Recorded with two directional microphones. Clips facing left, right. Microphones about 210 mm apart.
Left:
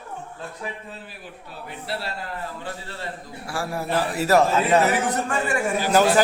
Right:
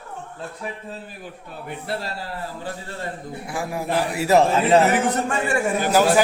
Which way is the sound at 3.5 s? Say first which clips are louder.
Right 1 dB; 15° right (ahead or behind).